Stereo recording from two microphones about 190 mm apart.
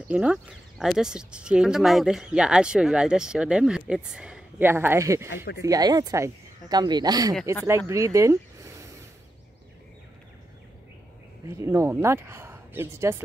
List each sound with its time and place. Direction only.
0.1 s speech: 5° right (ahead or behind)
11.4 s speech: 15° right (ahead or behind)